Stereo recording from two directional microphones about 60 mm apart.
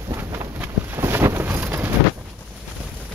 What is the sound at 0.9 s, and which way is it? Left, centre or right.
Boat, right.